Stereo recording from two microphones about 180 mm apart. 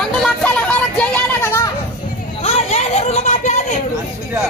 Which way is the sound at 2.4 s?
35° left (ahead or behind).